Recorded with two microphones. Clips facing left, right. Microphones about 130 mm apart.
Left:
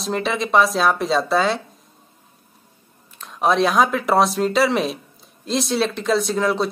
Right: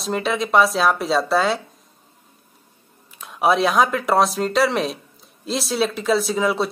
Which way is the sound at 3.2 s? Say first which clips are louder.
Even; 10° right (ahead or behind).